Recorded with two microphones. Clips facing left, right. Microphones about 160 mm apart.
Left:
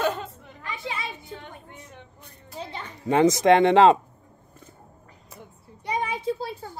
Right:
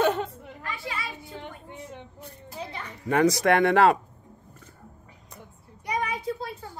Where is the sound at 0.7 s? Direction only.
20° left (ahead or behind).